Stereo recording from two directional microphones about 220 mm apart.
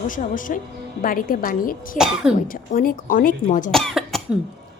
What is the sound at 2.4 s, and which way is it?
A woman's voice, 40° left (ahead or behind).